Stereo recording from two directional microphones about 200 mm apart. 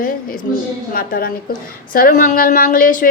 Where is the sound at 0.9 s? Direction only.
45° left (ahead or behind).